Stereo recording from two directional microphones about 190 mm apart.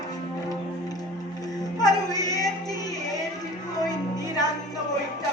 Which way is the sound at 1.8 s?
20° left (ahead or behind).